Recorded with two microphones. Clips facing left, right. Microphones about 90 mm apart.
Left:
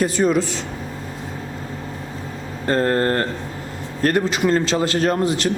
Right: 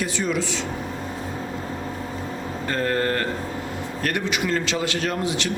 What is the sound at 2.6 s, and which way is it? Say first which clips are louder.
A man's voice: left 5 dB; 35° left (ahead or behind).